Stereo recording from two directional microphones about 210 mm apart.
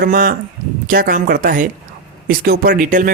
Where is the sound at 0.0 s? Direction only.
45° right (ahead or behind).